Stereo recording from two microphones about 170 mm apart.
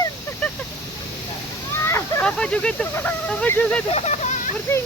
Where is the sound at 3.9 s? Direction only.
40° left (ahead or behind).